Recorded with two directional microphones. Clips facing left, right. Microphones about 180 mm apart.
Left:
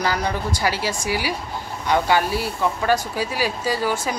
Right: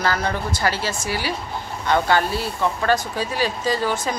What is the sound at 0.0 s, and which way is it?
Speech, 15° left (ahead or behind).